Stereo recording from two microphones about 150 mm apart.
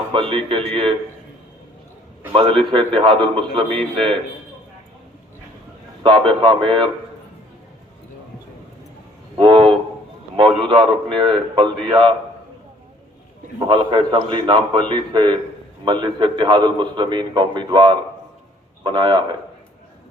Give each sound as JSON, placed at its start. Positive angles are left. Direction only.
{"t": 0.1, "sound": "a man's voice", "side_deg": -35}
{"t": 2.3, "sound": "a man's voice", "side_deg": -35}
{"t": 6.0, "sound": "a man's voice", "side_deg": -30}
{"t": 9.4, "sound": "train", "side_deg": -30}
{"t": 10.3, "sound": "a man's voice", "side_deg": -35}
{"t": 13.7, "sound": "a man's voice", "side_deg": -30}